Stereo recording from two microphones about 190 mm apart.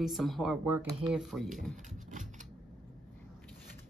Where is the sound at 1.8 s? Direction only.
40° right (ahead or behind).